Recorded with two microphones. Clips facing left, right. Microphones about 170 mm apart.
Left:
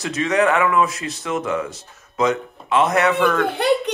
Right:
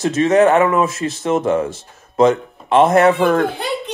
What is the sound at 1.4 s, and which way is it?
Speech, 30° right (ahead or behind).